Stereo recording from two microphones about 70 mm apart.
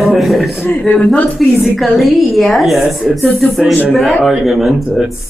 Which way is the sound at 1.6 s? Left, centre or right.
Centre.